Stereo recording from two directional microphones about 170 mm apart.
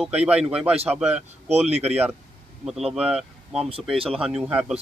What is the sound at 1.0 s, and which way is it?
Speech, 40° right (ahead or behind).